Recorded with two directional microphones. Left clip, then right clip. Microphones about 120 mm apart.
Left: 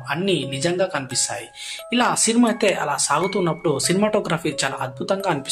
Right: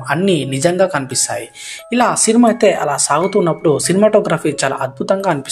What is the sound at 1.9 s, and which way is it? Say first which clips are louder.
Speech: right 6 dB; 35° right (ahead or behind).